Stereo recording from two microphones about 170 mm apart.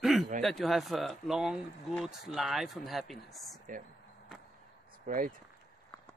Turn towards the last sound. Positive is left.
turn(degrees=-50)  # may be behind; listen again after turning